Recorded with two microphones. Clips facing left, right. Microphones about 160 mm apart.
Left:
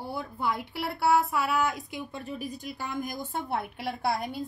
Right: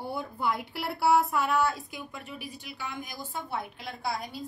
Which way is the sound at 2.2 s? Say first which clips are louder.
Left 6 dB; 40° left (ahead or behind).